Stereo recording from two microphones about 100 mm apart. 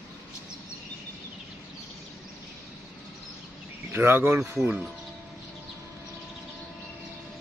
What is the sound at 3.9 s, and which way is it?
Speech, 25° right (ahead or behind).